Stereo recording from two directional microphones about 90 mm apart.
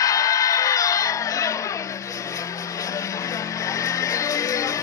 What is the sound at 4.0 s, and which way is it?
Music, 40° left (ahead or behind).